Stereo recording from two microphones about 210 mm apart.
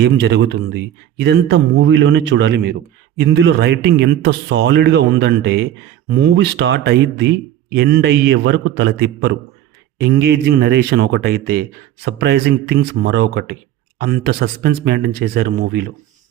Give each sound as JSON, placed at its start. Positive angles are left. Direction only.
{"t": 0.0, "sound": "speech", "side_deg": -55}